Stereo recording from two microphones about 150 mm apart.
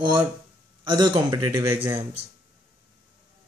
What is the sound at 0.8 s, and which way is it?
Speech, 30° right (ahead or behind).